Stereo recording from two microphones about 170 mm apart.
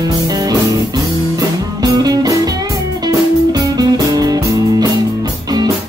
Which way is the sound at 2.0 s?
20° right (ahead or behind).